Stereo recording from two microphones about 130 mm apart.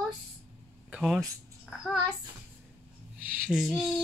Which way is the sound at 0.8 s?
5° right (ahead or behind).